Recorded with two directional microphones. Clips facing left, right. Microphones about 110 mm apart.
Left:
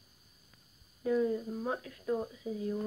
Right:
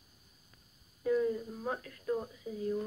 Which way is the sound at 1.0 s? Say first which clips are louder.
Even; 10° left (ahead or behind).